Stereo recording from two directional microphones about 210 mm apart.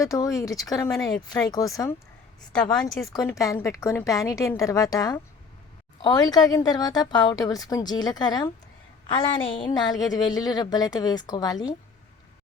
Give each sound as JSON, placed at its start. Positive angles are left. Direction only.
{"t": 0.0, "sound": "a woman's voice", "side_deg": 15}
{"t": 2.5, "sound": "a woman's voice", "side_deg": 5}
{"t": 3.1, "sound": "a woman's voice", "side_deg": 15}